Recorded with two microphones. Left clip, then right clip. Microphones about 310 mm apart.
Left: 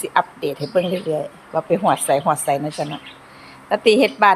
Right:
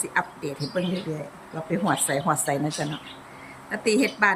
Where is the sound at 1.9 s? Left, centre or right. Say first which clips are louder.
Left 5 dB; centre.